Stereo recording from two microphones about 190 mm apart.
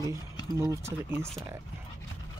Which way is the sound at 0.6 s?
15° right (ahead or behind).